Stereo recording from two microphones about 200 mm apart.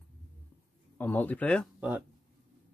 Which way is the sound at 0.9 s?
10° left (ahead or behind).